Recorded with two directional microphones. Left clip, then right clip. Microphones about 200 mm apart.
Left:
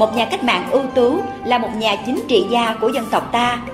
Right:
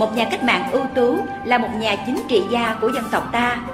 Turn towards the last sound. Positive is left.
turn(degrees=20)  # may be behind; listen again after turning